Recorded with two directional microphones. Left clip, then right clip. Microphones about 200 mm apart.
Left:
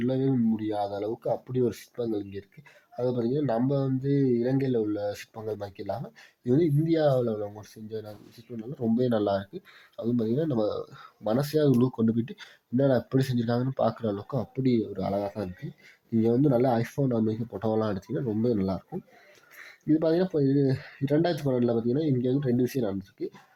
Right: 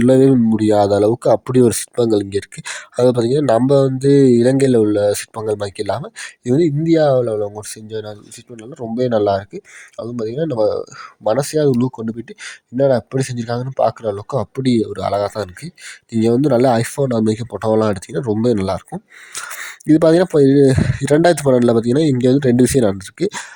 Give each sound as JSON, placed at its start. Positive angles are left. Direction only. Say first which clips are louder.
{"t": 0.0, "sound": "speech", "louder": "right 16 dB", "side_deg": -55}